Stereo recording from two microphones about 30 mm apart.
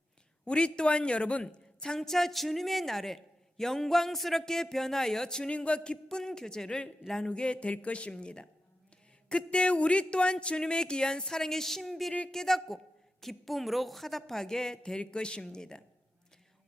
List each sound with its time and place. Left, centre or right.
0.4 s speech: left
2.0 s a man's voice: centre
5.5 s a man's voice: left
6.7 s speech: left
8.2 s a man's voice: left
14.8 s a man's voice: left